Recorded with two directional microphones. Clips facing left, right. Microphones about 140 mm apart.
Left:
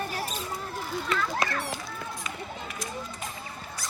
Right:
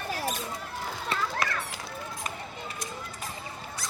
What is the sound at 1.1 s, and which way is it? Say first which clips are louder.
Children playing: left 2 dB; 30° right (ahead or behind).